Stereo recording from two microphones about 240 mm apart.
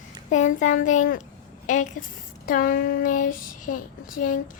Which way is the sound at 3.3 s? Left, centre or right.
Left.